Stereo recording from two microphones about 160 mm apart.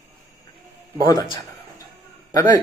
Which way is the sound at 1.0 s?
25° left (ahead or behind).